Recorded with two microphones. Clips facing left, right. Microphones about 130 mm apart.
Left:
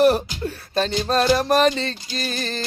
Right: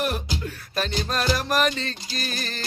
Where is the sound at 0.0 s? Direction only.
35° left (ahead or behind).